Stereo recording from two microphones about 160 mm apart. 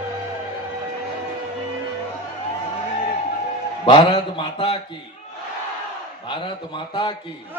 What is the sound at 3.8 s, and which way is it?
Speech, 35° left (ahead or behind).